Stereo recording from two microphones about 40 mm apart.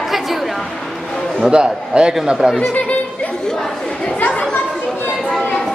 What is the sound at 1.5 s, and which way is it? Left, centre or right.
Speech, right.